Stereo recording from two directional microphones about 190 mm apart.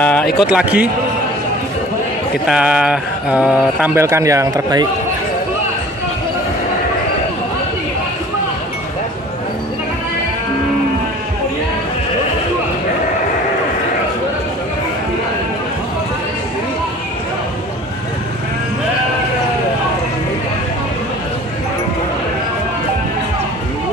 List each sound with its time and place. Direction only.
0.0 s speech: 5° left (ahead or behind)
0.4 s speech: 5° right (ahead or behind)
2.4 s speech: 5° right (ahead or behind)